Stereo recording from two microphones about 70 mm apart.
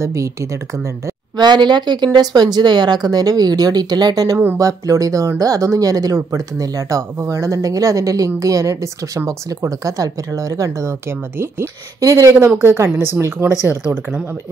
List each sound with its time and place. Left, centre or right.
0.0 s speech: right
1.3 s speech: right
4.6 s speech: right
12.0 s speech: right
12.4 s a woman's voice: right